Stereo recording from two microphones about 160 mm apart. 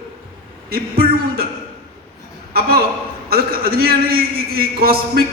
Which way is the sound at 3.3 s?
70° right (ahead or behind).